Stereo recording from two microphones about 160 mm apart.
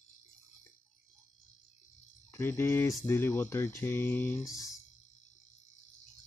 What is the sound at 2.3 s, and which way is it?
Speech, 15° left (ahead or behind).